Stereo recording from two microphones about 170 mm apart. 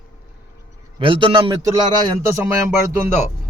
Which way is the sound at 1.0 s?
30° right (ahead or behind).